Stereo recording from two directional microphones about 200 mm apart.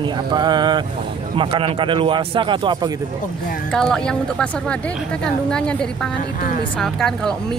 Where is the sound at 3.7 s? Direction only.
5° left (ahead or behind).